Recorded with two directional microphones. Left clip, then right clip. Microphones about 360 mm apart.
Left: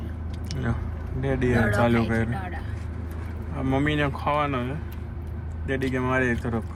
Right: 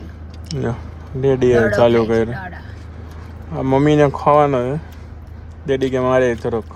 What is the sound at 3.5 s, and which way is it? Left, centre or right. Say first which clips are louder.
Speech: right 11 dB; right.